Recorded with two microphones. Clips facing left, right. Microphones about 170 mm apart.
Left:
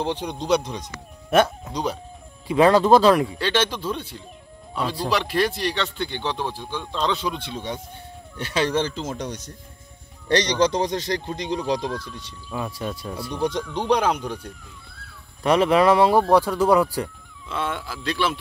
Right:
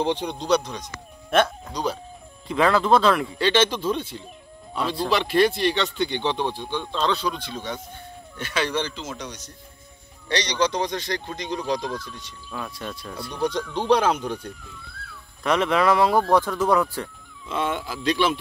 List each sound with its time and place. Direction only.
0.0 s speech: 10° left (ahead or behind)
1.3 s speech: 5° left (ahead or behind)
1.7 s speech: 20° left (ahead or behind)
2.6 s speech: 35° left (ahead or behind)
3.3 s speech: 5° left (ahead or behind); by 12.4 s 30° left (ahead or behind)
12.4 s speech: 10° left (ahead or behind)
13.4 s speech: 20° left (ahead or behind)
15.4 s speech: 30° left (ahead or behind)
16.3 s speech: 10° left (ahead or behind)
17.5 s speech: 10° right (ahead or behind)
18.0 s speech: centre (ahead or behind)